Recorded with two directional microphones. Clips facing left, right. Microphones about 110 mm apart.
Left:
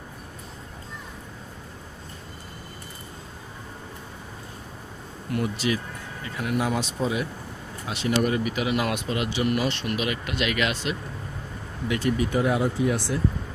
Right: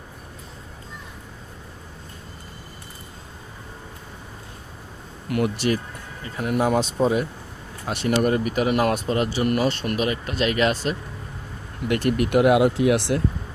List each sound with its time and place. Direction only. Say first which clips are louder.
5.3 s speech: right 4 dB; 90° right
6.2 s speech: right 4 dB; 40° right (ahead or behind)
11.9 s speech: right 3 dB; 60° right (ahead or behind)